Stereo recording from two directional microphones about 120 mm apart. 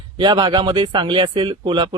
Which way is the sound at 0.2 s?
40° right (ahead or behind).